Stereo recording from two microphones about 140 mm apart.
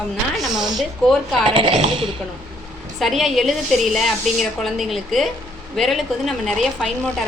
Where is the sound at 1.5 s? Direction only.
40° right (ahead or behind).